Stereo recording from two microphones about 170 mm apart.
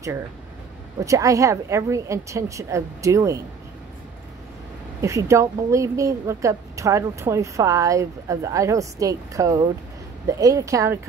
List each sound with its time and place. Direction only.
1.0 s a woman's voice: 20° right (ahead or behind)
5.0 s a woman's voice: 15° right (ahead or behind)